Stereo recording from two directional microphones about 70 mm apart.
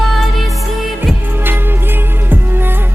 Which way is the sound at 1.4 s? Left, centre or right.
Right.